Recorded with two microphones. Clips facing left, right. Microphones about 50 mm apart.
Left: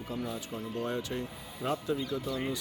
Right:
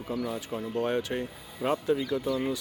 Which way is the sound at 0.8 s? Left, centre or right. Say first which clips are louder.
Right 6 dB; right.